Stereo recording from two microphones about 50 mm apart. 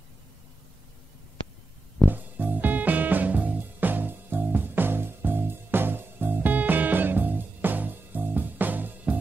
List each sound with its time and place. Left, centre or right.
2.0 s music: right